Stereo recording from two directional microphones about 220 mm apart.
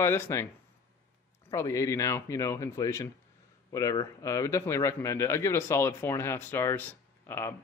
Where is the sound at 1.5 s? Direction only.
15° left (ahead or behind).